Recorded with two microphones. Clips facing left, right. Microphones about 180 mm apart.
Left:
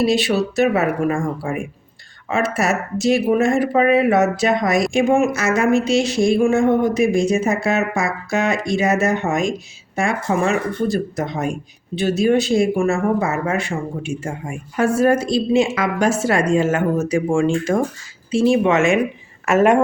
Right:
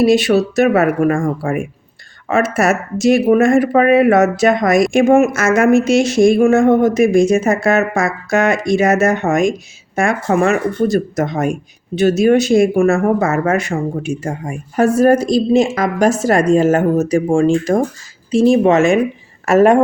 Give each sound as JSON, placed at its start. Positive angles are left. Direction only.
{"t": 0.0, "sound": "speech", "side_deg": -45}